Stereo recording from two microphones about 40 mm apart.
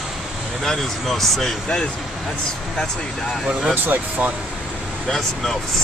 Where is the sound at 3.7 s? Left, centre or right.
Right.